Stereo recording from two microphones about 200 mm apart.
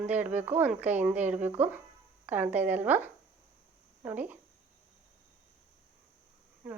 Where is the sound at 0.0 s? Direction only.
10° right (ahead or behind).